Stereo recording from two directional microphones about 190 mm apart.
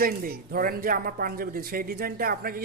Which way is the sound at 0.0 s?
50° right (ahead or behind).